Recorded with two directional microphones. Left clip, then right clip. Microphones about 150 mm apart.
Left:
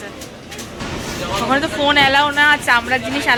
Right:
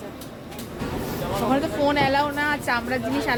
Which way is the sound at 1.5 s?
5° left (ahead or behind).